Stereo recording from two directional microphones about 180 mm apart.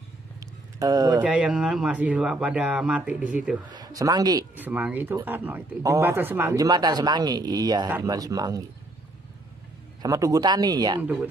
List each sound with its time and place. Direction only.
0.7 s speech: 20° right (ahead or behind)
1.2 s speech: 5° right (ahead or behind)
3.7 s speech: 20° right (ahead or behind)
4.6 s speech: 10° right (ahead or behind)
10.0 s speech: 20° right (ahead or behind)
11.0 s speech: 10° right (ahead or behind)